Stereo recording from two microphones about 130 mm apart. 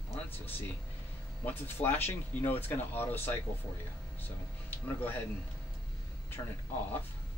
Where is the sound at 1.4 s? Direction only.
15° left (ahead or behind).